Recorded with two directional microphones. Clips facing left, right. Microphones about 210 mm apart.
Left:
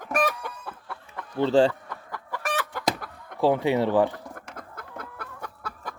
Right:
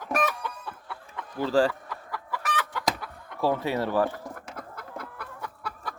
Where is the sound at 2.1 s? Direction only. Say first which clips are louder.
Left 2 dB; 45° left (ahead or behind).